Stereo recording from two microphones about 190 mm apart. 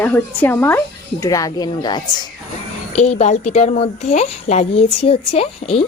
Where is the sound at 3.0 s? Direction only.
35° left (ahead or behind).